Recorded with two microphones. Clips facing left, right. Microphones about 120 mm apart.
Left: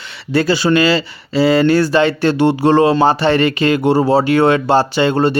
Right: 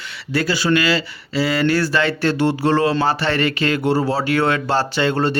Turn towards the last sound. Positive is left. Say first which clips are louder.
# left 5 dB
turn(degrees=15)  # may be behind; listen again after turning